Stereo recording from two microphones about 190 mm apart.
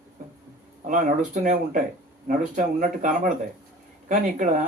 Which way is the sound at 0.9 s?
45° right (ahead or behind).